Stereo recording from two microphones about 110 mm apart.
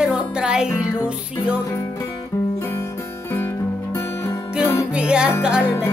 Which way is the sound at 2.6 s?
25° left (ahead or behind).